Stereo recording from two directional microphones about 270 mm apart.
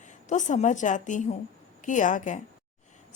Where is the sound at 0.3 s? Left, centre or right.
Left.